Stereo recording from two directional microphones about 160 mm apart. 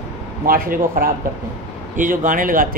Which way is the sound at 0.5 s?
65° right (ahead or behind).